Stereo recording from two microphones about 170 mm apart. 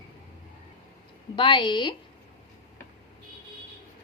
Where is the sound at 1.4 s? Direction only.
30° left (ahead or behind).